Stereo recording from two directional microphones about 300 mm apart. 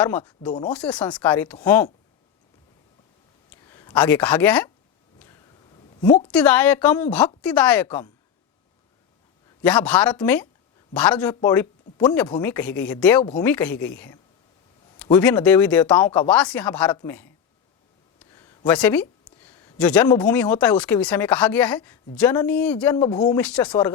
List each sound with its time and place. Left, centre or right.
0.0 s speech: centre
3.7 s speech: centre
5.2 s a sound: centre
6.1 s a woman's voice: centre
6.3 s speech: centre
9.6 s speech: centre